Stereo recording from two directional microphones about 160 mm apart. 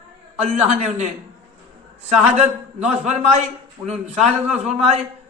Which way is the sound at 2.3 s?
45° right (ahead or behind).